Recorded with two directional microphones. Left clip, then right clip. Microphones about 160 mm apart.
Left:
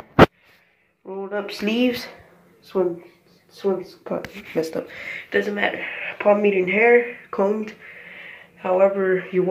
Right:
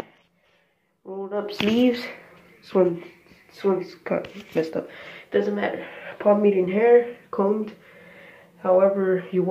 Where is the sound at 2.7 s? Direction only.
30° right (ahead or behind).